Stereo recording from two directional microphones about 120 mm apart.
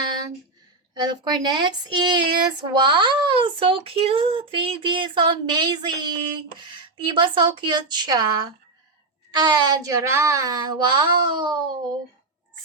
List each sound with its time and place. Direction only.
0.9 s speech: 35° right (ahead or behind)